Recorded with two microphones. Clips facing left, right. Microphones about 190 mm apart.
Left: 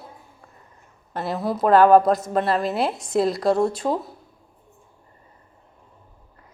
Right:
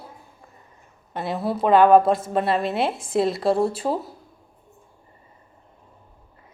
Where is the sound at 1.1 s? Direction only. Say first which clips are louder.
Even; centre (ahead or behind).